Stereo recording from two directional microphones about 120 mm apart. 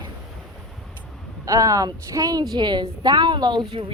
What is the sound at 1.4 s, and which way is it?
A woman's voice, 30° right (ahead or behind).